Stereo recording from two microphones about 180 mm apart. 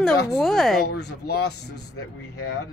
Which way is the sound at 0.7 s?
65° left (ahead or behind).